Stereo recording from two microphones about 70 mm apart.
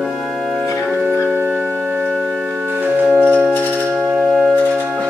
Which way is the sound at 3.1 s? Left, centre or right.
Right.